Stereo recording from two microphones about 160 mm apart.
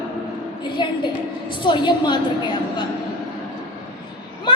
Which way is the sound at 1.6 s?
30° left (ahead or behind).